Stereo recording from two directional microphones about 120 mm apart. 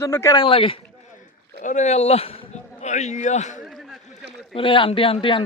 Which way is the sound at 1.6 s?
80° left.